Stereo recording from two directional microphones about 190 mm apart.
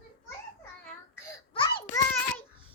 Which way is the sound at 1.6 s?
25° left (ahead or behind).